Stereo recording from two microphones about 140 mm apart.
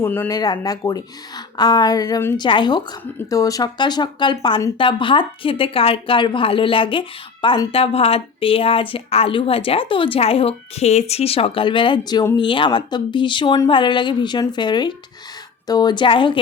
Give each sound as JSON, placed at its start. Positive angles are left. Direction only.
{"t": 0.0, "sound": "speech", "side_deg": 15}
{"t": 0.3, "sound": "a woman's voice", "side_deg": 30}
{"t": 7.7, "sound": "speech", "side_deg": 45}